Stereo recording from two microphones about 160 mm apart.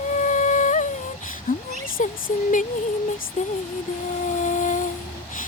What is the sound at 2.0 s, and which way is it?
Speech, 55° left (ahead or behind).